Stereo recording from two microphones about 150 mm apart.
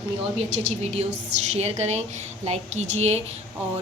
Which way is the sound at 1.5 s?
45° right (ahead or behind).